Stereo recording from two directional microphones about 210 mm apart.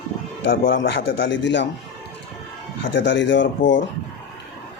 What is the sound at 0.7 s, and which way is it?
Speech, 60° left (ahead or behind).